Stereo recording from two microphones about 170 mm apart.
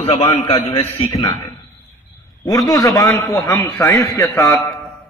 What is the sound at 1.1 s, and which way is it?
Speech, 20° left (ahead or behind).